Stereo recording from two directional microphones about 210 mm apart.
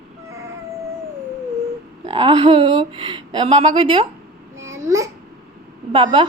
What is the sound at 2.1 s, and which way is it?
A child's voice, 25° right (ahead or behind).